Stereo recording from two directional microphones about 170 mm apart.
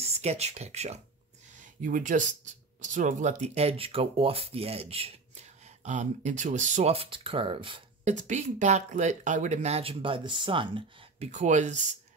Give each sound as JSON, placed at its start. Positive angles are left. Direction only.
{"t": 0.0, "sound": "speech", "side_deg": -40}
{"t": 1.8, "sound": "speech", "side_deg": -50}
{"t": 8.0, "sound": "speech", "side_deg": -45}
{"t": 11.3, "sound": "speech", "side_deg": -45}